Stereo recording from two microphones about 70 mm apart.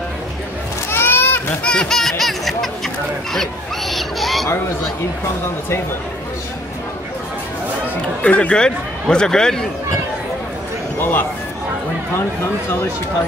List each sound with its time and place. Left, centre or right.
0.8 s children playing: left
1.6 s a sound: centre
8.2 s speech: centre
11.0 s speech: left